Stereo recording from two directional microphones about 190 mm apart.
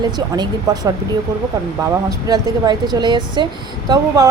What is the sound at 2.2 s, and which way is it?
A woman's voice, 20° right (ahead or behind).